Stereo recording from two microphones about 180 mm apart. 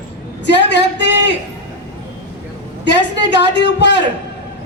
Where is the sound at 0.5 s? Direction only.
75° left (ahead or behind).